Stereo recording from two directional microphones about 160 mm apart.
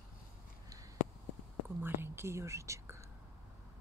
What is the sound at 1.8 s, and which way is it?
Speech, 15° right (ahead or behind).